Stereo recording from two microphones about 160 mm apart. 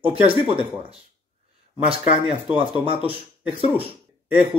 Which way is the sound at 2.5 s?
35° right (ahead or behind).